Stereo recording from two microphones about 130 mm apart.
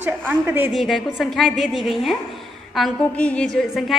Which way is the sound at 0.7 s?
Centre (ahead or behind).